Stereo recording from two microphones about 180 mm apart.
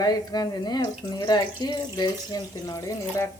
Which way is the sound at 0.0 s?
20° left (ahead or behind).